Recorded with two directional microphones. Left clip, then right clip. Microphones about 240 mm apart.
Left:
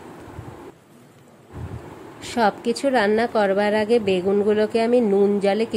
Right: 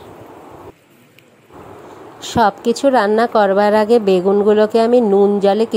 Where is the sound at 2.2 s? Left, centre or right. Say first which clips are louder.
Right 6 dB; centre.